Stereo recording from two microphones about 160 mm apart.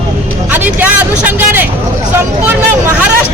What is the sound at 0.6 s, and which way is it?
Vehicle, 10° right (ahead or behind).